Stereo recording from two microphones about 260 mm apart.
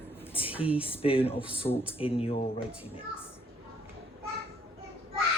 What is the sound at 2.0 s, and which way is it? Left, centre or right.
Speech, left.